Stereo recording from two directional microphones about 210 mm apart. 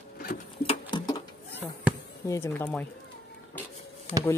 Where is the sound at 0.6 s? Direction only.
20° left (ahead or behind).